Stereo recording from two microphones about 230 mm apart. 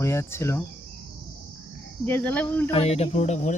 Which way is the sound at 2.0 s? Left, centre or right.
Centre.